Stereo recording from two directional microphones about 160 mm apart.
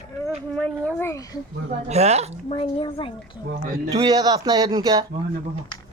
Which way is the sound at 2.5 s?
35° left (ahead or behind).